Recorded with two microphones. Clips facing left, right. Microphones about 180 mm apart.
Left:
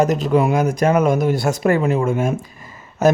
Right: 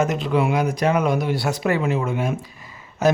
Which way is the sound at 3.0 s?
45° left (ahead or behind).